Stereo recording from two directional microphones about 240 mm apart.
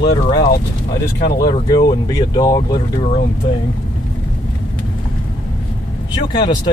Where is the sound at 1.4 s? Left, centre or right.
Centre.